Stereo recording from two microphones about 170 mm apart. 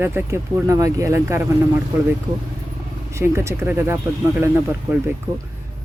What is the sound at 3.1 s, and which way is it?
Speech, 15° right (ahead or behind).